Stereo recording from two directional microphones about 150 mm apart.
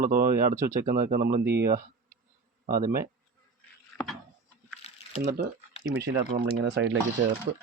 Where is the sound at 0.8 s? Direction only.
65° right (ahead or behind); by 1.8 s 90° right.